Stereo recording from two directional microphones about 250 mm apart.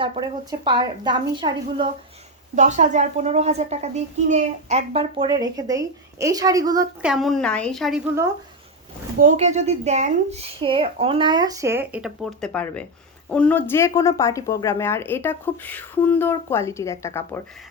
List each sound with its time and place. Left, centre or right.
0.0 s a woman's voice: centre
2.6 s a child's voice: right; by 7.1 s centre
7.1 s a woman's voice: centre
9.1 s a child's voice: right; by 17.4 s centre